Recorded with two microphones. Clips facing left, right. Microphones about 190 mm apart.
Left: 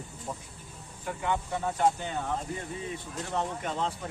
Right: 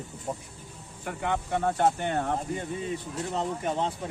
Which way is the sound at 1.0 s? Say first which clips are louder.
Right 1 dB; 70° right (ahead or behind).